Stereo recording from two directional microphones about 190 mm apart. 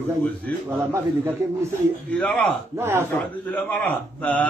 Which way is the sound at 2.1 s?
5° left (ahead or behind).